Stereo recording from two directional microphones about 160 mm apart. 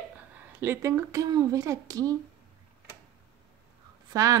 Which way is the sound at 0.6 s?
15° right (ahead or behind).